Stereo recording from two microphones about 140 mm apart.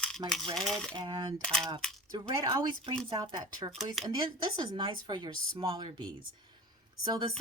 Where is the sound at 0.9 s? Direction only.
35° right (ahead or behind).